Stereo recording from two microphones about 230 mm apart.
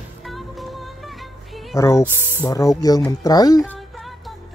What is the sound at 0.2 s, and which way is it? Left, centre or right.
Music, centre.